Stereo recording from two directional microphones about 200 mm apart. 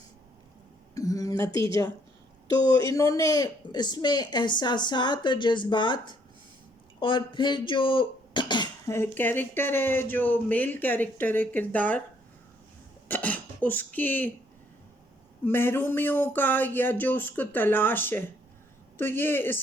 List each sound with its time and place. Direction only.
0.9 s a sound: 15° left (ahead or behind)
2.7 s speech: 15° left (ahead or behind)
13.1 s speech: 10° left (ahead or behind)
15.4 s speech: 10° left (ahead or behind)